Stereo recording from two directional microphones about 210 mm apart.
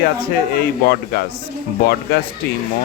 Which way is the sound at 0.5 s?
45° left (ahead or behind).